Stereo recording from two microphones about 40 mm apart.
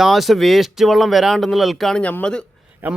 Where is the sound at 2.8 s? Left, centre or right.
Right.